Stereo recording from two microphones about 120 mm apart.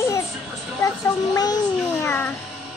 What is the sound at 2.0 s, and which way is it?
Speech, 15° left (ahead or behind).